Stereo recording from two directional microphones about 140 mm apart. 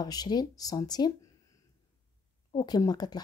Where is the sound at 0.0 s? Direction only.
30° left (ahead or behind).